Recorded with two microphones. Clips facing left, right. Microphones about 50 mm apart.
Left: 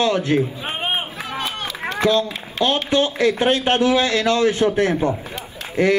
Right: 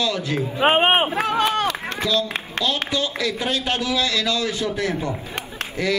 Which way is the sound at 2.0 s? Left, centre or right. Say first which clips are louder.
Left 5 dB; left.